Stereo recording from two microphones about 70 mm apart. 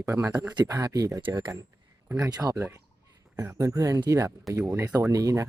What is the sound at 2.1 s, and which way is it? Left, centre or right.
Speech, right.